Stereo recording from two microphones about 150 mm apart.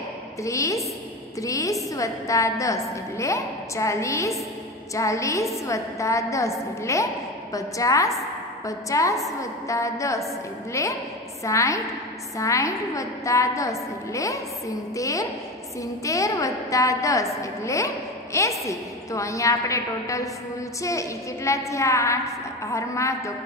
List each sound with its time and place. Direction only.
0.4 s a woman's voice: 20° left (ahead or behind)